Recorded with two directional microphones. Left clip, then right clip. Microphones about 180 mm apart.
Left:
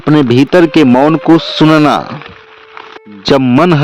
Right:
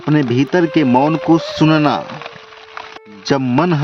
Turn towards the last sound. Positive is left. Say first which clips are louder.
# left 7 dB
turn(degrees=35)  # may be behind; listen again after turning